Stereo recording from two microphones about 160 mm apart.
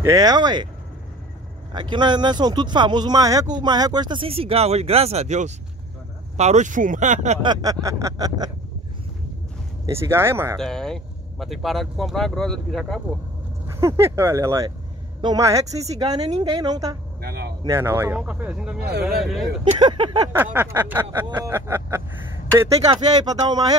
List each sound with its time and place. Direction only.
0.0 s speech: 20° right (ahead or behind)
1.7 s speech: 30° right (ahead or behind); by 7.3 s 50° right (ahead or behind)
7.4 s speech: 20° right (ahead or behind)
9.8 s snicker: 15° right (ahead or behind)
10.6 s speech: 5° left (ahead or behind)
13.7 s snicker: 15° right (ahead or behind)
15.2 s speech: 20° right (ahead or behind)
17.2 s a sound: 85° right
17.6 s snicker: 15° right (ahead or behind)
19.0 s speech: centre (ahead or behind)
19.6 s speech: 30° right (ahead or behind)
20.3 s snicker: 15° right (ahead or behind)
22.8 s speech: 25° right (ahead or behind)